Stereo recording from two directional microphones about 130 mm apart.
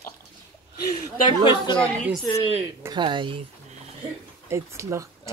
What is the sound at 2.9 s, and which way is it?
Speech, 40° right (ahead or behind).